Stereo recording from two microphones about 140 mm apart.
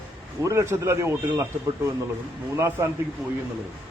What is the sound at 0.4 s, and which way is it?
A man's voice, 20° right (ahead or behind).